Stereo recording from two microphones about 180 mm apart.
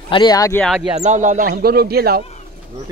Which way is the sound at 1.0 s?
40° right (ahead or behind).